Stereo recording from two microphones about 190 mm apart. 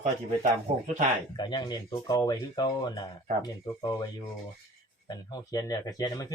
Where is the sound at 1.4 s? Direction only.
20° left (ahead or behind).